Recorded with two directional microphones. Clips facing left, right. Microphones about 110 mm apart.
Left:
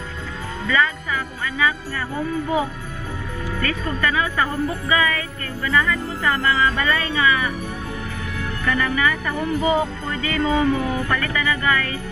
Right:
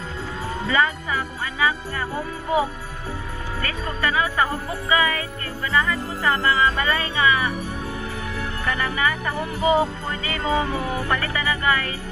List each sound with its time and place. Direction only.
0.7 s speech: 30° right (ahead or behind)
8.6 s speech: 30° right (ahead or behind)